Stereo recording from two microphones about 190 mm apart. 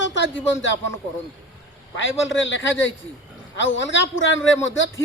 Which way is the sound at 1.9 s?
80° left.